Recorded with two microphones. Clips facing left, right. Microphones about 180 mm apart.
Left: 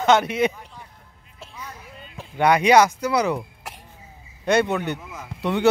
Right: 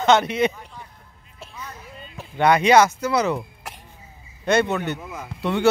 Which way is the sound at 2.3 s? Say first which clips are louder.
Even; 10° left (ahead or behind).